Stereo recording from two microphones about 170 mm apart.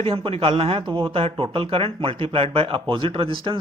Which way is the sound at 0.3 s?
35° right (ahead or behind).